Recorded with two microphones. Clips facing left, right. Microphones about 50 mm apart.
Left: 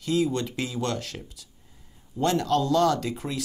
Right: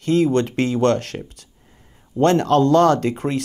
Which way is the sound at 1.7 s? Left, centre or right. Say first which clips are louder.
Right 9 dB; right.